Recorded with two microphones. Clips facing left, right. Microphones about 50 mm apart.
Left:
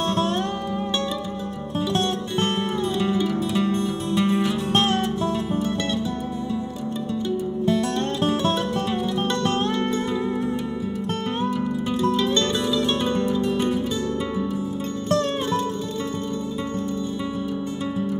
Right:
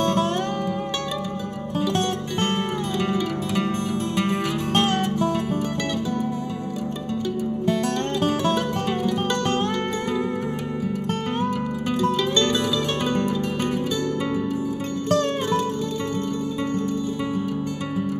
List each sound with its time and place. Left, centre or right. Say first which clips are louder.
3.5 s music: left 1 dB; right
13.1 s music: left 1 dB; right